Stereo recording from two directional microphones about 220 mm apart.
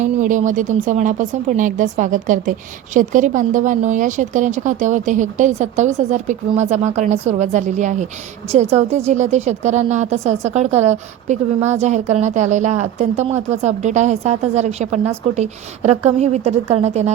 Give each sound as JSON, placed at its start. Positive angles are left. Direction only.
{"t": 0.0, "sound": "a woman's voice", "side_deg": -35}